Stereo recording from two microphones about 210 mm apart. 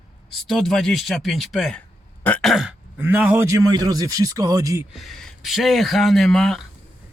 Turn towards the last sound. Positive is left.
turn(degrees=0)  # may be behind; listen again after turning